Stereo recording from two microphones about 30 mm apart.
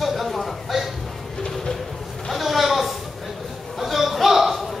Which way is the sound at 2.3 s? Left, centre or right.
Centre.